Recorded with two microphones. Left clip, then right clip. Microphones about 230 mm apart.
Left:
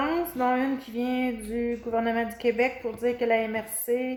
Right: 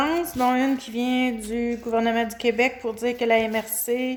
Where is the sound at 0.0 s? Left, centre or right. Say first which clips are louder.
Right 4 dB; right.